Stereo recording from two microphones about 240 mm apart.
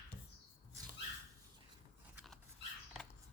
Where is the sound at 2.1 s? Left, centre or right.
Centre.